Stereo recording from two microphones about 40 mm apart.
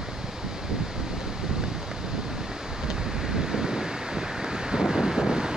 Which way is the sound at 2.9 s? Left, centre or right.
Centre.